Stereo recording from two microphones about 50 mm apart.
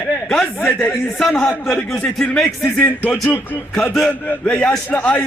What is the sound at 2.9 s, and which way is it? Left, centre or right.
Speech, left.